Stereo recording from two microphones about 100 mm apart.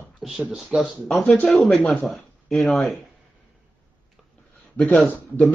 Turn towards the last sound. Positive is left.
turn(degrees=10)  # may be behind; listen again after turning